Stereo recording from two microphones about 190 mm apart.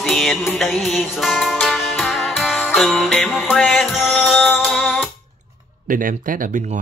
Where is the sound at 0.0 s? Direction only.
Centre (ahead or behind).